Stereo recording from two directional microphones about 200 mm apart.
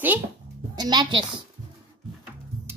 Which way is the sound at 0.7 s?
20° right (ahead or behind).